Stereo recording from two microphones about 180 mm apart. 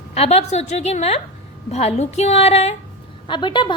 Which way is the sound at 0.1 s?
35° left (ahead or behind).